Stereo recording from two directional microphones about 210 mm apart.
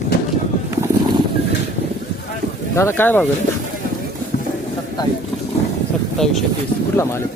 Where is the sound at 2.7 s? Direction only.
10° left (ahead or behind).